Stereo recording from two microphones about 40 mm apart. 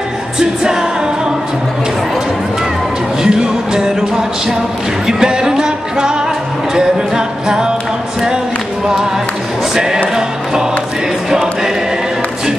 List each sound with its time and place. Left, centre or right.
3.2 s music: centre
11.2 s choir: centre